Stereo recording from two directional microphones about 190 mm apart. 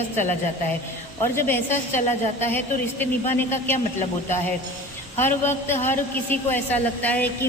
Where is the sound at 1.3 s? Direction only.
10° left (ahead or behind).